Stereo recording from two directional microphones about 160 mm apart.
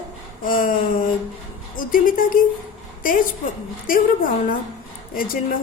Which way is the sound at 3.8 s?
60° left (ahead or behind).